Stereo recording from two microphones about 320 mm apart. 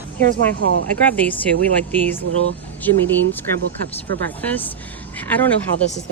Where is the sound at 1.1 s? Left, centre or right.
Centre.